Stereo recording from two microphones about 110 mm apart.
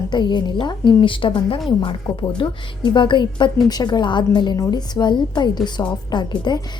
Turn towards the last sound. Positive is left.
turn(degrees=40)  # may be behind; listen again after turning